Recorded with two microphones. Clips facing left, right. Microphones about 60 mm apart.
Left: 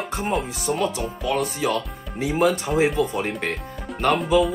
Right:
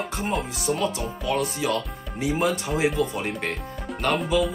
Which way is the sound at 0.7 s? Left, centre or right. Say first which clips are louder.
Left 2 dB; centre.